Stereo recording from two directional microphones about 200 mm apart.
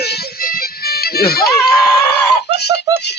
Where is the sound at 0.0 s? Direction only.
55° left (ahead or behind).